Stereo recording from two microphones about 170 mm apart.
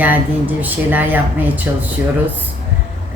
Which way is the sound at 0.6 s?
10° right (ahead or behind).